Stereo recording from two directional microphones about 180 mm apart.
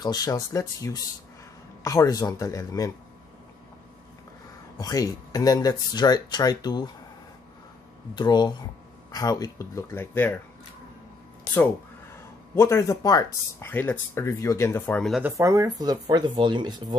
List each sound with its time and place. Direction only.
0.0 s speech: 20° left (ahead or behind)
4.7 s speech: 20° left (ahead or behind)
8.1 s speech: 25° left (ahead or behind)
12.5 s speech: 15° left (ahead or behind)
15.2 s speech: 15° right (ahead or behind)